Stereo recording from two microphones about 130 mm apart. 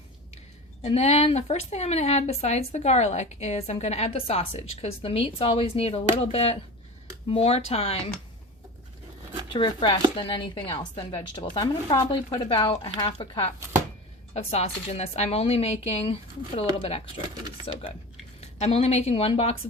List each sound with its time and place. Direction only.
0.8 s speech: 55° left (ahead or behind)
9.5 s speech: 40° left (ahead or behind)
17.7 s a woman's voice: 50° left (ahead or behind)